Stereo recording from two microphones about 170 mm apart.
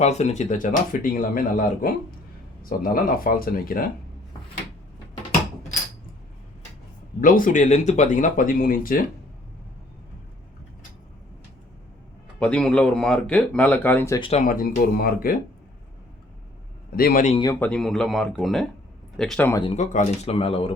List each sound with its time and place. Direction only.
0.0 s speech: 40° left (ahead or behind); by 3.8 s 55° left (ahead or behind)
7.2 s speech: 55° left (ahead or behind)
12.4 s speech: 5° left (ahead or behind)
14.2 s speech: 35° left (ahead or behind)
14.4 s speech: 55° left (ahead or behind)
16.9 s speech: 60° left (ahead or behind)
17.3 s speech: 25° left (ahead or behind)
17.6 s speech: 5° left (ahead or behind)
19.6 s speech: 40° left (ahead or behind)